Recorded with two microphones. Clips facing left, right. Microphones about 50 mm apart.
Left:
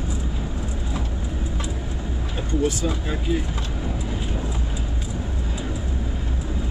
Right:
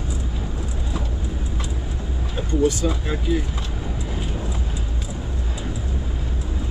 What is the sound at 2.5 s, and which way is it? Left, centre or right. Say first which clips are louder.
Speech: right 3 dB; centre.